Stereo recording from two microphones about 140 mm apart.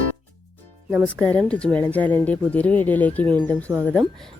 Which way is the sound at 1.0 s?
10° left (ahead or behind).